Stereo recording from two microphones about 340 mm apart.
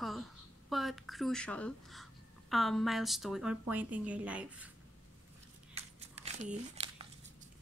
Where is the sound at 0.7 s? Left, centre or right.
Centre.